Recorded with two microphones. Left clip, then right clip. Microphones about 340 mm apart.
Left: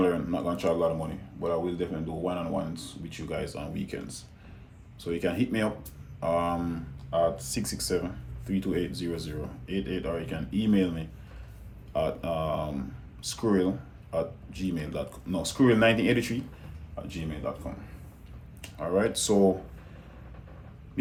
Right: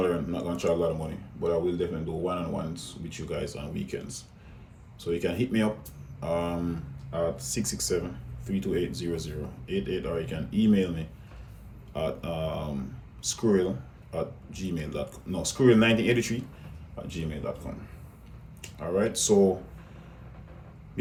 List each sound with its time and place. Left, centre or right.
0.0 s a sound: centre
1.4 s speech: centre
18.8 s speech: centre